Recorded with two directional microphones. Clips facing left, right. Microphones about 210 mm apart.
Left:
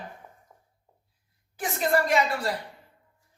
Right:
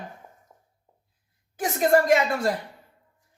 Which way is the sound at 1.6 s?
45° right (ahead or behind).